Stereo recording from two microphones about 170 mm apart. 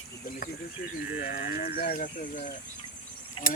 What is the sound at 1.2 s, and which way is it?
Speech, 60° left (ahead or behind).